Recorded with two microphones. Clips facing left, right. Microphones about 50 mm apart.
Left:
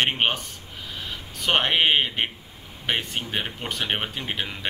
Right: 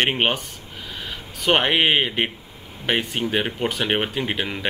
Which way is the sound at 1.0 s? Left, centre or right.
Centre.